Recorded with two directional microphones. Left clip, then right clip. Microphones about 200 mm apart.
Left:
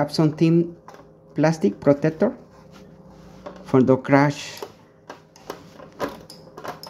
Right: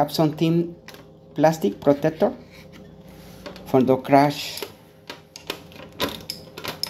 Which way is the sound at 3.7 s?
40° left (ahead or behind).